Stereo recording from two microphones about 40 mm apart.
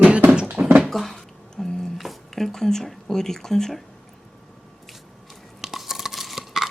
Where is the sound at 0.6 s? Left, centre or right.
Right.